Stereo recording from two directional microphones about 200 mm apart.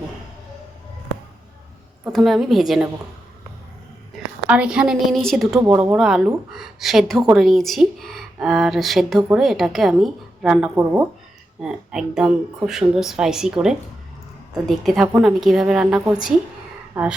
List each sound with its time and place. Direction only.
2.1 s speech: centre (ahead or behind)
4.4 s speech: 5° right (ahead or behind)
5.6 s speech: 20° right (ahead or behind)
5.9 s speech: centre (ahead or behind)